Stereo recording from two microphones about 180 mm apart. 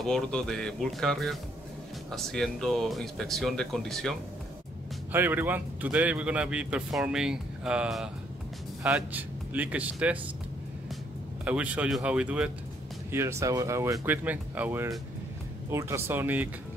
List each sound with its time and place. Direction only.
0.0 s speech: 5° left (ahead or behind)
5.1 s a man's voice: 10° right (ahead or behind)
11.4 s a man's voice: 5° right (ahead or behind)